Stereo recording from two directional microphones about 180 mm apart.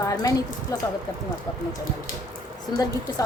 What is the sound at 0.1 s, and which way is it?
Speech, 20° left (ahead or behind).